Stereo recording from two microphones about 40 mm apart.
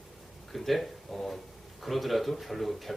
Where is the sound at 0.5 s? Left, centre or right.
Centre.